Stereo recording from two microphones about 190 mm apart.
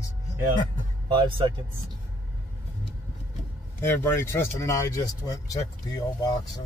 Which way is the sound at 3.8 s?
10° left (ahead or behind).